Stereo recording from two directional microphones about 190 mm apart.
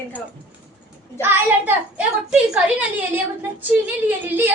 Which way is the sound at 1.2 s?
10° right (ahead or behind).